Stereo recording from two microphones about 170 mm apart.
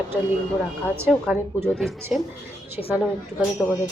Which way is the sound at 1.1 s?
5° right (ahead or behind).